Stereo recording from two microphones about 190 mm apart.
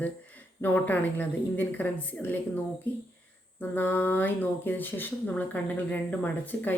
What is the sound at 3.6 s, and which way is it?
Speech, 10° left (ahead or behind).